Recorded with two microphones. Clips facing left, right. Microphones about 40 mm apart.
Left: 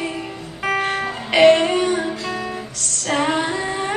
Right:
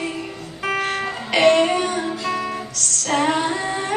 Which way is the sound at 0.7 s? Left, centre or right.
Centre.